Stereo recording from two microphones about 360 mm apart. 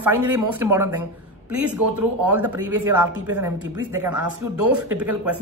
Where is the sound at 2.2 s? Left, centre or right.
Centre.